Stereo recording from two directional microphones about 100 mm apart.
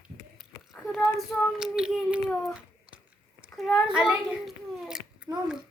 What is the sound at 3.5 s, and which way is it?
A child's voice, centre (ahead or behind).